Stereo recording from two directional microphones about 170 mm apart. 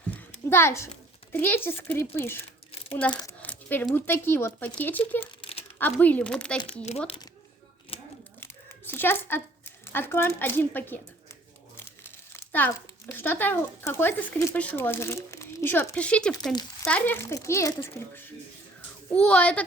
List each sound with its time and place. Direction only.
0.5 s a child's voice: 15° left (ahead or behind)
3.4 s a sound: 10° left (ahead or behind)
3.9 s a child's voice: 15° left (ahead or behind)
5.2 s crumpling: 35° left (ahead or behind)
5.8 s a child's voice: 10° left (ahead or behind)
7.9 s a sound: 35° left (ahead or behind)
8.4 s a sound: 10° left (ahead or behind)
11.8 s speech: 15° left (ahead or behind)
16.3 s speech: 25° left (ahead or behind)
16.8 s a child's voice: 10° left (ahead or behind)